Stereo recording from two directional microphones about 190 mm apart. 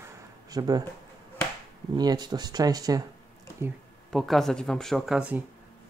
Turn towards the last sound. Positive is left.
turn(degrees=-5)  # may be behind; listen again after turning